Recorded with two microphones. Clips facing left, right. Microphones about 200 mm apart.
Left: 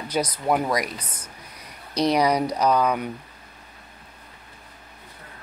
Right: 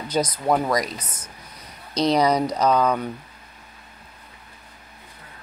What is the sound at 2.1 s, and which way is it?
Speech, 10° left (ahead or behind).